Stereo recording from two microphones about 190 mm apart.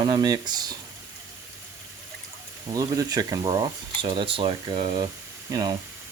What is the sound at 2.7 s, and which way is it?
Speech, 20° right (ahead or behind).